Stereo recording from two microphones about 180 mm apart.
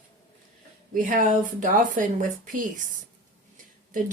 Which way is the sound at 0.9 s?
45° right (ahead or behind).